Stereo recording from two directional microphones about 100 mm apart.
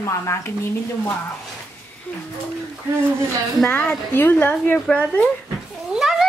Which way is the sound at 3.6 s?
15° left (ahead or behind).